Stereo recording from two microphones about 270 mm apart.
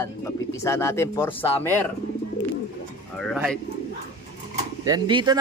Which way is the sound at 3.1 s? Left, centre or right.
Centre.